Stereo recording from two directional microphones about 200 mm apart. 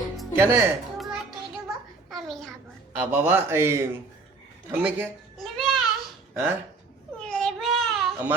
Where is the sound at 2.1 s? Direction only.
Centre (ahead or behind).